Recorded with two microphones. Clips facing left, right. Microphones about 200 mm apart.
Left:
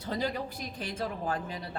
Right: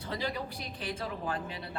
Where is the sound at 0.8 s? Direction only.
40° left (ahead or behind).